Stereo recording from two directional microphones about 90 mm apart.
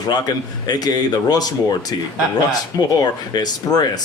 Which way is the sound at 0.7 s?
50° left (ahead or behind).